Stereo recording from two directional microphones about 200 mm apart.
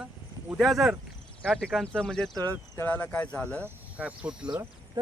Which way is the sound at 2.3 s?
20° right (ahead or behind).